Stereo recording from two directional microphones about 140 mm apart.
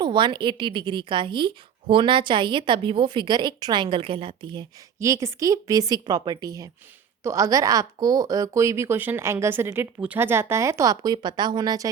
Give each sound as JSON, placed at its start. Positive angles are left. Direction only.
{"t": 0.0, "sound": "a woman's voice", "side_deg": -35}
{"t": 4.9, "sound": "a woman's voice", "side_deg": -20}